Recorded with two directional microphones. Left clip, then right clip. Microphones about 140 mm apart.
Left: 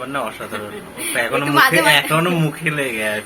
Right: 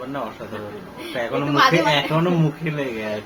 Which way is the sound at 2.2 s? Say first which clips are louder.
Left 3 dB; 20° right (ahead or behind).